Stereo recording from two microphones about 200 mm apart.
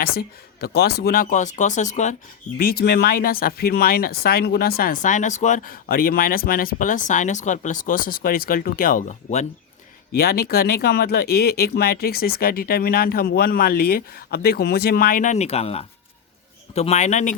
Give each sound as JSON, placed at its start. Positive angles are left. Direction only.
{"t": 0.0, "sound": "speech", "side_deg": 50}
{"t": 2.6, "sound": "speech", "side_deg": 50}
{"t": 10.2, "sound": "a man's voice", "side_deg": 50}